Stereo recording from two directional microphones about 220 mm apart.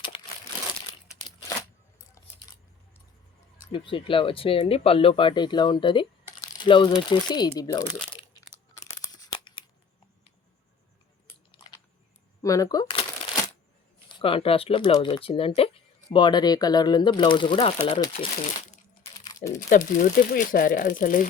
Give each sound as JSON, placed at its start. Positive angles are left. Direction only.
{"t": 0.1, "sound": "crumpling", "side_deg": 25}
{"t": 2.2, "sound": "a sound", "side_deg": 15}
{"t": 3.7, "sound": "speech", "side_deg": 25}
{"t": 8.5, "sound": "tearing", "side_deg": 15}
{"t": 12.4, "sound": "shuffling cards", "side_deg": 15}
{"t": 14.1, "sound": "speech", "side_deg": 25}
{"t": 19.5, "sound": "speech", "side_deg": 40}